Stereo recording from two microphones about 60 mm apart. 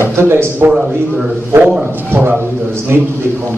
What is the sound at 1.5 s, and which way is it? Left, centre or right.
Speech, right.